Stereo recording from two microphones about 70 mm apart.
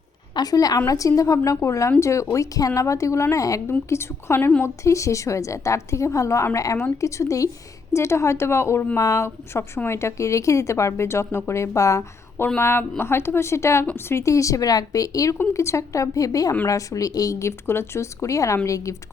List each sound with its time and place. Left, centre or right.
0.3 s a woman's voice: left
3.8 s a woman's voice: left
4.6 s a woman's voice: left
9.0 s a woman's voice: left
12.5 s a woman's voice: left
17.7 s a woman's voice: left